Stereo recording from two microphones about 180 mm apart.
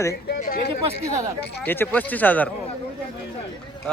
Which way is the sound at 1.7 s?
10° left (ahead or behind).